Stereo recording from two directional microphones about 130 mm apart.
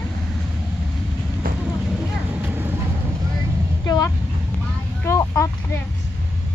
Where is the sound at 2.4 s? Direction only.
15° right (ahead or behind).